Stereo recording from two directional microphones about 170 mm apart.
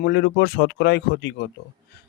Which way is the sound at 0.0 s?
80° left.